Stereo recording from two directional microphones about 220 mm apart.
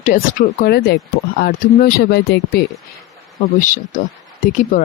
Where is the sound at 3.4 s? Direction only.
35° left (ahead or behind).